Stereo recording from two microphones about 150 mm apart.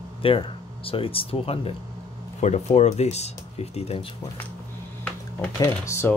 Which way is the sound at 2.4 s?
50° left (ahead or behind).